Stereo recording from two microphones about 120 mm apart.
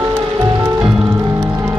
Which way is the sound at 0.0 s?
25° right (ahead or behind).